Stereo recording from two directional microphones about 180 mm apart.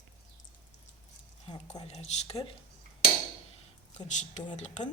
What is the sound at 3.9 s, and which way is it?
Speech, 40° left (ahead or behind).